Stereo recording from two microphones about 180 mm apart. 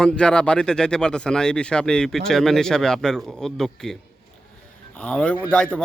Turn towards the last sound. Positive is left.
turn(degrees=5)  # may be behind; listen again after turning